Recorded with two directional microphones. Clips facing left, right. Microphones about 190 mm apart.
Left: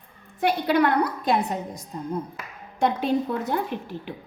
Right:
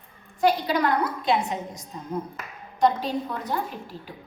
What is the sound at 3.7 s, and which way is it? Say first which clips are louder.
Speech: left 6 dB; 60° left (ahead or behind).